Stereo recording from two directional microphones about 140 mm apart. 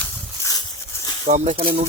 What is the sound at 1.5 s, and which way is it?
Speech, 40° right (ahead or behind).